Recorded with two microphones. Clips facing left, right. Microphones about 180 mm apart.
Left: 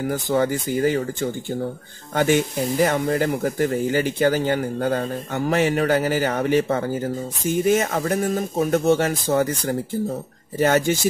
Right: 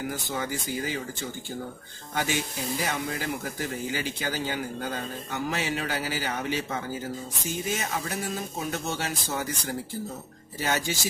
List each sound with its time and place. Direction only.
0.1 s speech: 55° left (ahead or behind)